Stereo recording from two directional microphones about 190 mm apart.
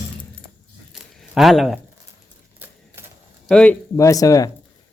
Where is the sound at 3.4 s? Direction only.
5° left (ahead or behind).